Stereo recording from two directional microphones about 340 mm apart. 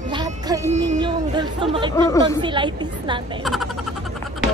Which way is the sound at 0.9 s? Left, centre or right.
Centre.